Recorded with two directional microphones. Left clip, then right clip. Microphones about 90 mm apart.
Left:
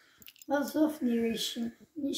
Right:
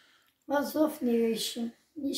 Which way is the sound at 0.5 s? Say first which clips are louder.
Right 1 dB; 30° right (ahead or behind).